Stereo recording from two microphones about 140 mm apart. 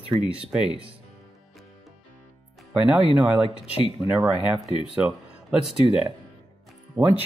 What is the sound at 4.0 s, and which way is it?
Speech, 5° right (ahead or behind).